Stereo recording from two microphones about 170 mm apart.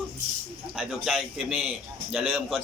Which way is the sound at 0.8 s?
5° right (ahead or behind).